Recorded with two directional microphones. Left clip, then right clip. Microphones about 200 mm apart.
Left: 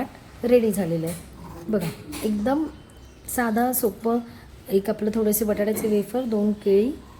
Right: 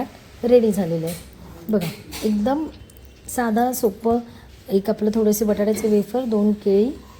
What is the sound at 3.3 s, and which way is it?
A woman's voice, 5° right (ahead or behind).